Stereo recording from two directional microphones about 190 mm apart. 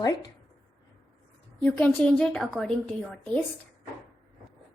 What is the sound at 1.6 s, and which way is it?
A woman's voice, 5° left (ahead or behind).